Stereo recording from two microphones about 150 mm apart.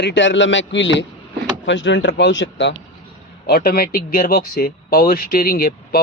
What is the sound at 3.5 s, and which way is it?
Speech, 85° left.